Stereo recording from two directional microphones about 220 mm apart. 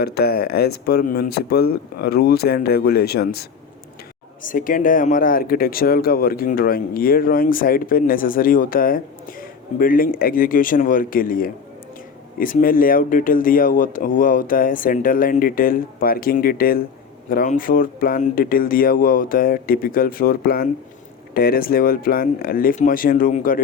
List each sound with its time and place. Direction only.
0.0 s speech: 45° left (ahead or behind)
4.4 s speech: 40° left (ahead or behind)